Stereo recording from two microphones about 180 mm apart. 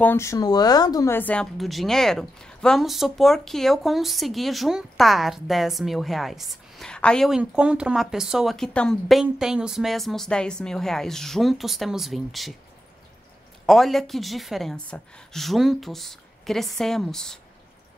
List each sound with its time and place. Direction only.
0.0 s speech: 15° left (ahead or behind)
13.7 s speech: centre (ahead or behind)